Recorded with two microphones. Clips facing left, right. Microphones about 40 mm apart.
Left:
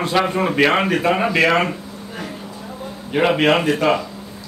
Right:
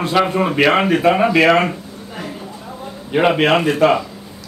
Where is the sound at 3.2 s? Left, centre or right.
Centre.